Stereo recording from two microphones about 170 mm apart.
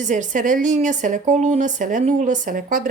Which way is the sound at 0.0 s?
45° right (ahead or behind).